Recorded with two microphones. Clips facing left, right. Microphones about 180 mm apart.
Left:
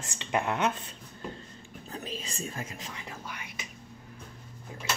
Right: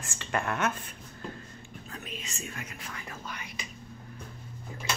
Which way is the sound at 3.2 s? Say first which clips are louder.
Right 1 dB; 10° left (ahead or behind).